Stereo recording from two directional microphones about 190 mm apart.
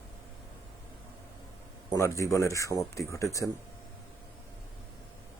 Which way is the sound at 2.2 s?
15° left (ahead or behind).